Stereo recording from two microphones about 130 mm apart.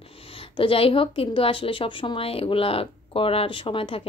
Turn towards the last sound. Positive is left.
turn(degrees=45)  # may be behind; listen again after turning